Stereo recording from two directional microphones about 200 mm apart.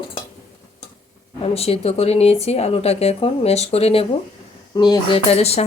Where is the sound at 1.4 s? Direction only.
30° left (ahead or behind).